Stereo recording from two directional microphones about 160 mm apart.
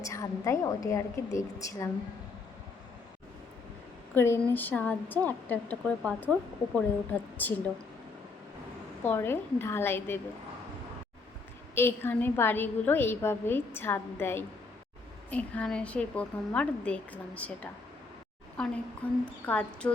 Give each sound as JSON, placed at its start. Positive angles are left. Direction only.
{"t": 0.0, "sound": "a woman's voice", "side_deg": 20}
{"t": 4.1, "sound": "a woman's voice", "side_deg": 15}
{"t": 9.0, "sound": "a woman's voice", "side_deg": 15}
{"t": 11.7, "sound": "a woman's voice", "side_deg": 15}
{"t": 19.0, "sound": "a woman's voice", "side_deg": 10}